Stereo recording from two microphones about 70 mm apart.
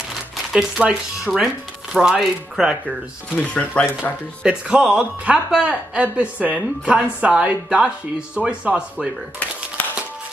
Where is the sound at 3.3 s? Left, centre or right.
Centre.